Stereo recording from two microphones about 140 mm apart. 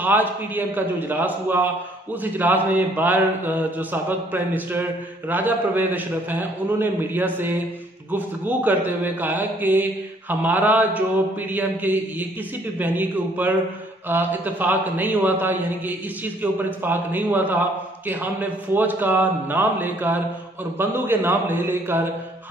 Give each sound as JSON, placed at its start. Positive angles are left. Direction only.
{"t": 0.0, "sound": "a man's voice", "side_deg": -15}